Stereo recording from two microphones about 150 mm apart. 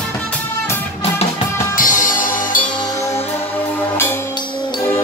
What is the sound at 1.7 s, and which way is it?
Music, 60° left (ahead or behind).